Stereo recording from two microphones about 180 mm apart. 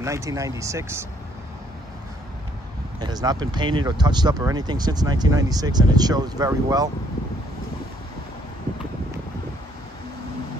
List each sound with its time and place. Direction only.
0.0 s speech: 15° right (ahead or behind)
3.0 s speech: 20° right (ahead or behind)